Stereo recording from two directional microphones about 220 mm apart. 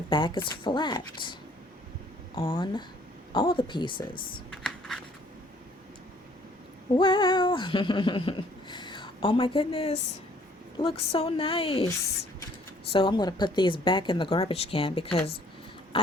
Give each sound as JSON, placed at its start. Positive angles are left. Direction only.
{"t": 0.1, "sound": "speech", "side_deg": 20}
{"t": 4.5, "sound": "scratch", "side_deg": 0}
{"t": 6.9, "sound": "cat", "side_deg": 20}
{"t": 10.8, "sound": "speech", "side_deg": 25}
{"t": 12.9, "sound": "speech", "side_deg": 20}